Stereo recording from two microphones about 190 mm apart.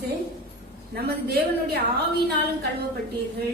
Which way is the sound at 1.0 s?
55° right (ahead or behind).